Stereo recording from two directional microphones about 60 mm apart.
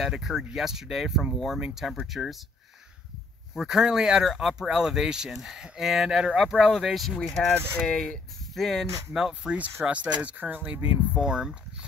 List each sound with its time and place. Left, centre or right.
0.0 s speech: centre
3.5 s speech: centre
8.5 s speech: centre
9.1 s speech: centre
9.8 s speech: right